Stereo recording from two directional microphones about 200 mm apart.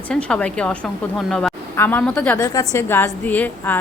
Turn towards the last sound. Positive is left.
turn(degrees=10)  # may be behind; listen again after turning